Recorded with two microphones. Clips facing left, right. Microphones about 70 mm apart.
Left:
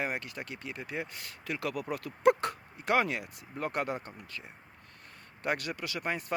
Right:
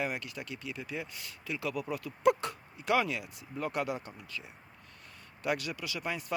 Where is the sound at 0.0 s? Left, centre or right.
Left.